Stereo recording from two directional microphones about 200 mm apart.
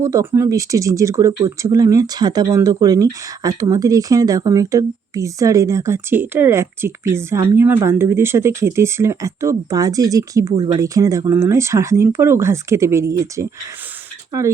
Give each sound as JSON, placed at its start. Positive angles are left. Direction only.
{"t": 0.0, "sound": "speech", "side_deg": -15}